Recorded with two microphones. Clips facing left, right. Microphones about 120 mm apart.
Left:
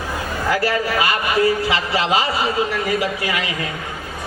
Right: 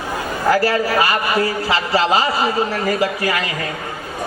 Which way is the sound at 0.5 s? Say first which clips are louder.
Right 3 dB; 40° right (ahead or behind).